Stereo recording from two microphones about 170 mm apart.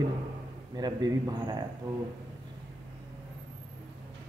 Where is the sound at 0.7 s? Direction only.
25° right (ahead or behind).